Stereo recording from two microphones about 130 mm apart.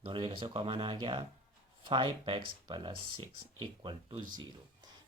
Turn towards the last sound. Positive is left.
turn(degrees=-35)  # may be behind; listen again after turning